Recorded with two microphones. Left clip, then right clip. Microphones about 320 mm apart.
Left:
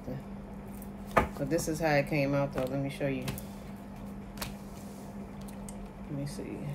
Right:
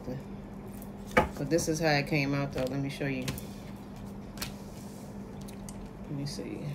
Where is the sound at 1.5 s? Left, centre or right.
Left.